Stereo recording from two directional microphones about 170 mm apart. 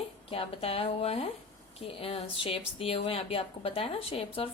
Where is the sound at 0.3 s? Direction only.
35° left (ahead or behind).